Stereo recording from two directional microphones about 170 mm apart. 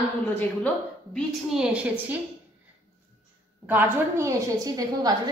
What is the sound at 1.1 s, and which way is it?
A woman's voice, 5° right (ahead or behind).